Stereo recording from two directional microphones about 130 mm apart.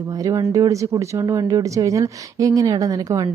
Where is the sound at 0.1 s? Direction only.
25° right (ahead or behind).